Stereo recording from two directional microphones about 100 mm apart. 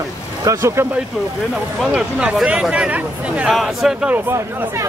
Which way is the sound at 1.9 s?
10° right (ahead or behind).